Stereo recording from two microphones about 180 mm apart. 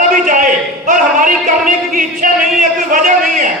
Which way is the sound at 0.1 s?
45° right (ahead or behind).